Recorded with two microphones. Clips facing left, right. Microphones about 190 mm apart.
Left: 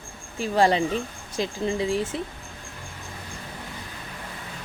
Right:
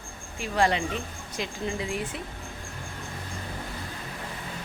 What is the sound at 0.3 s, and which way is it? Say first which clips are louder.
Speech: left 5 dB; 35° left (ahead or behind).